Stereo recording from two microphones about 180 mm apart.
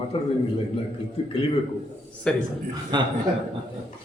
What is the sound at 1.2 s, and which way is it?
Speech, 35° left (ahead or behind).